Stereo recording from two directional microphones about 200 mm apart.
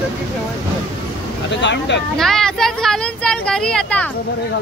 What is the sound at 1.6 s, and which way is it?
Speech, 60° left (ahead or behind).